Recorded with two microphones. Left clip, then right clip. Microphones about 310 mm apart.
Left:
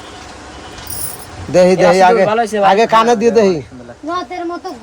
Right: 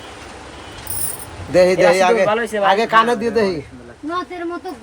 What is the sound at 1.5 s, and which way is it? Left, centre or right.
Speech, left.